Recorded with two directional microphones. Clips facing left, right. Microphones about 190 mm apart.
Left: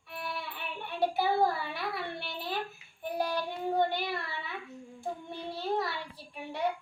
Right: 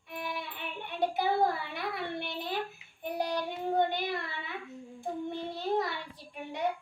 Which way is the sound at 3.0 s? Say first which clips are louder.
Even; 20° right (ahead or behind).